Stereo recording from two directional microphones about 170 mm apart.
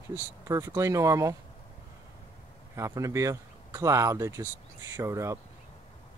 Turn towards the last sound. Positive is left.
turn(degrees=-15)  # may be behind; listen again after turning